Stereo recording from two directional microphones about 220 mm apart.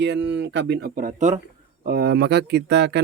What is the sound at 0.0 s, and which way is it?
Speech, 50° right (ahead or behind).